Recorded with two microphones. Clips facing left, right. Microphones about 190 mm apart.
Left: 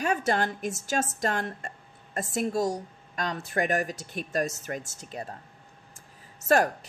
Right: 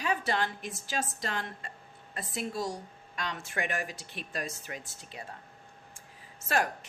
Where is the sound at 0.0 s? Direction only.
45° left (ahead or behind).